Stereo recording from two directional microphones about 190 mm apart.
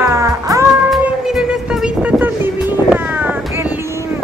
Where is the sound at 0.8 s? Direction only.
Centre (ahead or behind).